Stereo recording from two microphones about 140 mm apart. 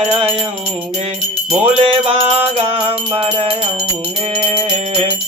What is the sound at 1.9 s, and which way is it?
Music, 40° right (ahead or behind).